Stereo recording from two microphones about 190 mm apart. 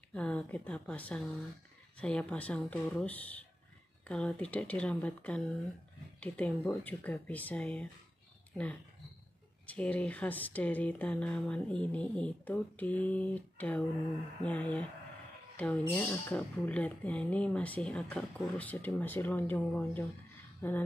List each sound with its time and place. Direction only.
0.1 s speech: 5° left (ahead or behind)
9.7 s speech: 5° left (ahead or behind)